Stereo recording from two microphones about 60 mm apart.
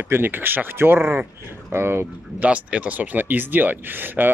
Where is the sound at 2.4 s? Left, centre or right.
Right.